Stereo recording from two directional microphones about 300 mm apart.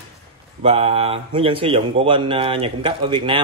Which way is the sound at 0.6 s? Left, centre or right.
Centre.